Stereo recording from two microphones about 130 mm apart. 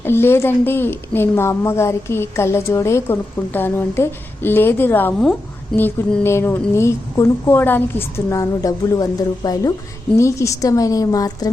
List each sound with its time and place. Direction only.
0.0 s a woman's voice: 20° left (ahead or behind)